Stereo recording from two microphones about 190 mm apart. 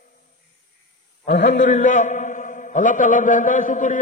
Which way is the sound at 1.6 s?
40° left (ahead or behind).